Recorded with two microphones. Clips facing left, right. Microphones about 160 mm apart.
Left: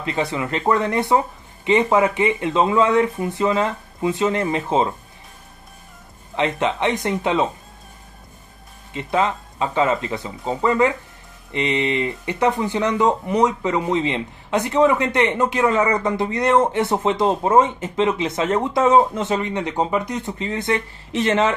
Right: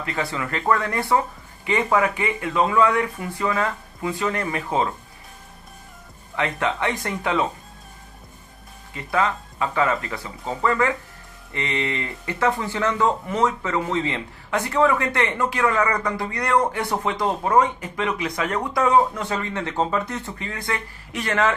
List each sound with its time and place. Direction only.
0.0 s speech: 20° left (ahead or behind)
6.3 s speech: 20° left (ahead or behind)
8.9 s speech: 20° left (ahead or behind)